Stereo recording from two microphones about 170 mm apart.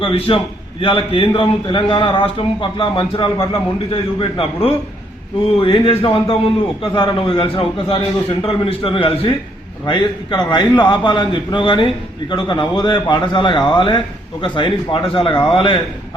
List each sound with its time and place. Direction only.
0.0 s a man's voice: 30° left (ahead or behind)